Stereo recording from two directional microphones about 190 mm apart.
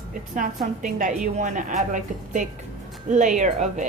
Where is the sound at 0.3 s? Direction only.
45° right (ahead or behind).